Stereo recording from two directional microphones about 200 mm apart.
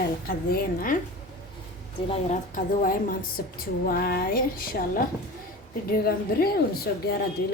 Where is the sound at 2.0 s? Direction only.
40° left (ahead or behind).